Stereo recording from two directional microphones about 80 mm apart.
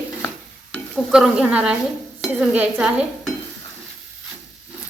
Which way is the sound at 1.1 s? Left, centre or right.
Centre.